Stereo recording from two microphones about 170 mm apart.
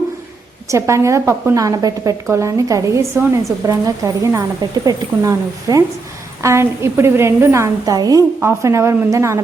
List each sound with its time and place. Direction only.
0.7 s a woman's voice: 15° right (ahead or behind)